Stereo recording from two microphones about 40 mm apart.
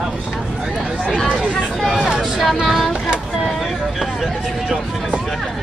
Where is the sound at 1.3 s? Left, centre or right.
Centre.